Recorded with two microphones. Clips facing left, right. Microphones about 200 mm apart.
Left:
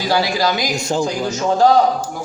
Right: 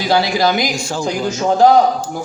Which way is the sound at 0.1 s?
20° right (ahead or behind).